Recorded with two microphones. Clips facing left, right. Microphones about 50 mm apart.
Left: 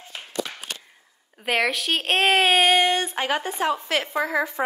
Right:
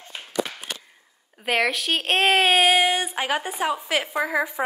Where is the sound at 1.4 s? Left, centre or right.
Centre.